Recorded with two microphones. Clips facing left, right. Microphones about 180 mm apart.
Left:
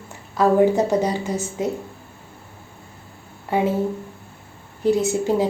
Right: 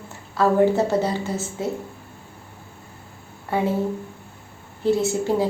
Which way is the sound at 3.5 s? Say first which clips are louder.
Left 2 dB; 15° left (ahead or behind).